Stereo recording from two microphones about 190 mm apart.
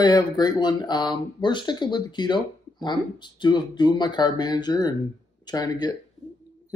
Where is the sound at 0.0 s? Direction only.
20° left (ahead or behind).